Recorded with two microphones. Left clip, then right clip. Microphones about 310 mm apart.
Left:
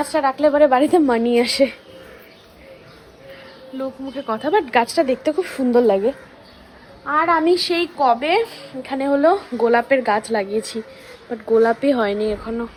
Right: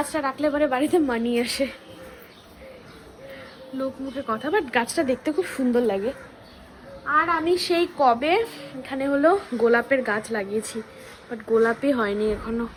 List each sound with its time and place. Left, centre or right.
0.0 s a woman's voice: centre
3.8 s a woman's voice: centre
7.1 s a woman's voice: centre
11.8 s a woman's voice: centre